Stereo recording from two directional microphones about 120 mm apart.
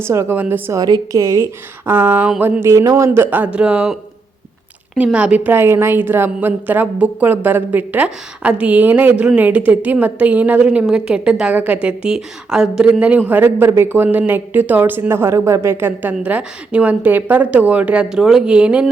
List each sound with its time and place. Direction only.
0.0 s speech: 20° right (ahead or behind)
1.1 s speech: 30° right (ahead or behind)
1.9 s a woman's voice: 15° right (ahead or behind)
5.0 s a woman's voice: 10° right (ahead or behind)